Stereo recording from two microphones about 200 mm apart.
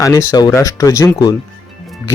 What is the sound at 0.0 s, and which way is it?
Speech, 15° left (ahead or behind).